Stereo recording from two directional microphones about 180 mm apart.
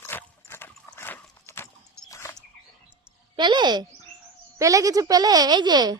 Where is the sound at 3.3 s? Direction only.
25° right (ahead or behind).